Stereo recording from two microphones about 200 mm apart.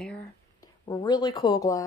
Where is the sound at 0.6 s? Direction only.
20° left (ahead or behind).